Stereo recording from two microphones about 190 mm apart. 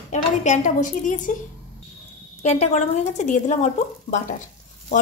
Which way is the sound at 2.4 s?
35° left (ahead or behind).